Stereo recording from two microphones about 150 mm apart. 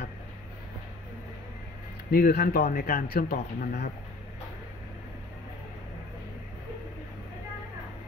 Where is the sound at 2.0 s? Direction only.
90° left.